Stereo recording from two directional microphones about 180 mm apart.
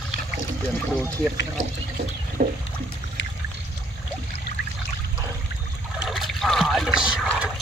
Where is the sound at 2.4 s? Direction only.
50° right (ahead or behind).